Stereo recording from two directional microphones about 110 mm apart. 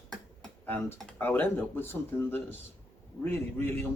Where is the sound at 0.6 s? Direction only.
20° left (ahead or behind).